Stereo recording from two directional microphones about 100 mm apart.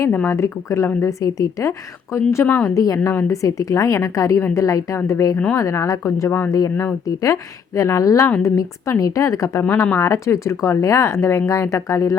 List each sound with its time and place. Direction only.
0.0 s a woman's voice: 25° left (ahead or behind)
10.0 s speech: 30° left (ahead or behind)